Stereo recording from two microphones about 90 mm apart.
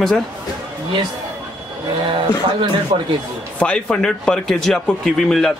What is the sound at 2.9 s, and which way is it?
Speech, 85° right.